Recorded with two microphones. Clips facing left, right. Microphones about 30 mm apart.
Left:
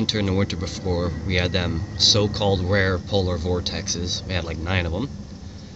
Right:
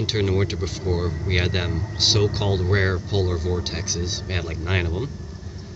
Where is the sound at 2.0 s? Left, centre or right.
Centre.